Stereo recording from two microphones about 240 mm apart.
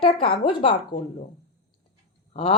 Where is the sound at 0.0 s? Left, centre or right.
Left.